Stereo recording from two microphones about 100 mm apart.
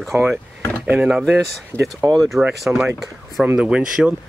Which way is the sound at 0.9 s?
5° right (ahead or behind).